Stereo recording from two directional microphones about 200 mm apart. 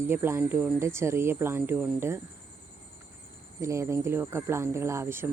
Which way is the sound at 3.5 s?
15° right (ahead or behind).